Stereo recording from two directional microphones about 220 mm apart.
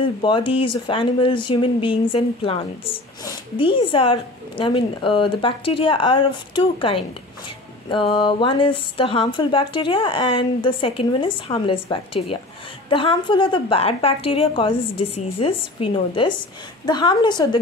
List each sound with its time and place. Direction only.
0.0 s speech: 25° left (ahead or behind)